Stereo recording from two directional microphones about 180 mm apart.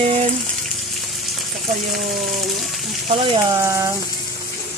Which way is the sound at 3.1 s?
30° right (ahead or behind).